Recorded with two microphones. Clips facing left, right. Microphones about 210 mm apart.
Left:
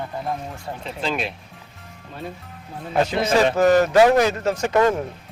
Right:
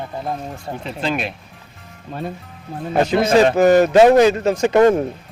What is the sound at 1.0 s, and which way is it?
Speech, 60° right (ahead or behind).